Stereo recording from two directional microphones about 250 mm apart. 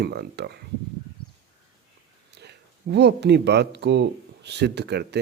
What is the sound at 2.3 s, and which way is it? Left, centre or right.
Speech, right.